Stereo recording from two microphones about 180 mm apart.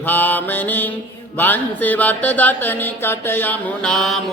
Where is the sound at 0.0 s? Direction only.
10° left (ahead or behind).